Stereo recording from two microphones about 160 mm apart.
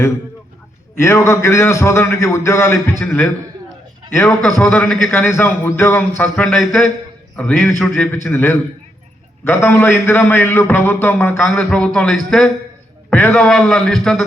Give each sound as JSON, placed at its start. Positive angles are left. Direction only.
{"t": 0.9, "sound": "a man's voice", "side_deg": 15}
{"t": 4.4, "sound": "a man's voice", "side_deg": 5}